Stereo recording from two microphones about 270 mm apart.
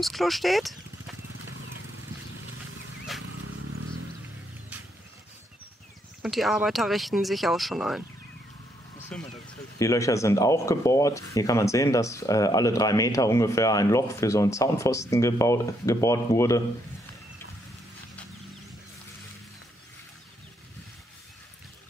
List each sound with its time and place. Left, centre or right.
0.0 s speech: centre
3.2 s a sound: right
6.2 s speech: centre
9.1 s speech: centre